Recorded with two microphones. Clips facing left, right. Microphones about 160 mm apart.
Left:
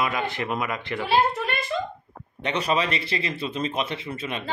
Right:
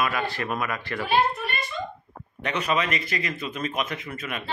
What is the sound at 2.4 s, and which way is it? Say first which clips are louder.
A man's voice: left 1 dB; 30° left (ahead or behind).